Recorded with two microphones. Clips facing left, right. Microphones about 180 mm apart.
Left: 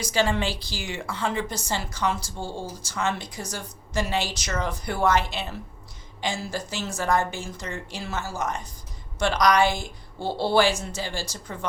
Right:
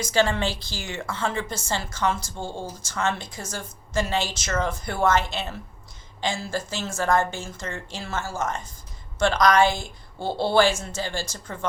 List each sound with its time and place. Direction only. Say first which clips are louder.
0.0 s a woman's voice: right 2 dB; 10° left (ahead or behind)
2.4 s speech: even; 15° right (ahead or behind)
2.8 s a woman's voice: right 1 dB; 15° left (ahead or behind)